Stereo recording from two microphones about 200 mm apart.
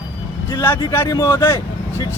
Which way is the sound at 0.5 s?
15° left (ahead or behind).